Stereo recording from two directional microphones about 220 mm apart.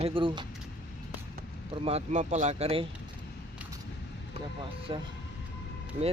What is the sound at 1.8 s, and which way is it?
Speech, 30° right (ahead or behind).